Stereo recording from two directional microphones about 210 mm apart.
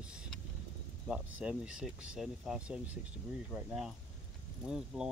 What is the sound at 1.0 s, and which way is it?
Speech, centre (ahead or behind).